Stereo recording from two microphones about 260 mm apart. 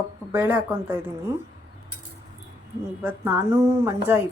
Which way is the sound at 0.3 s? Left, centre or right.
Centre.